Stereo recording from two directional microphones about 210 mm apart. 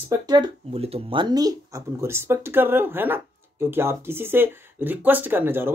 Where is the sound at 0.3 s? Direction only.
25° right (ahead or behind).